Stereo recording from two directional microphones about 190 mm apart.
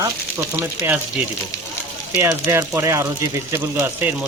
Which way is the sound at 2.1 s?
15° right (ahead or behind).